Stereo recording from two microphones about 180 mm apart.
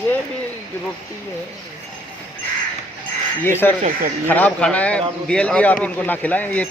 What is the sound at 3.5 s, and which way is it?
A man's voice, 10° left (ahead or behind).